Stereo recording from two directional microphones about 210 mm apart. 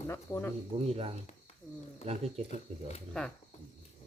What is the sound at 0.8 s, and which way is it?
Speech, 30° right (ahead or behind).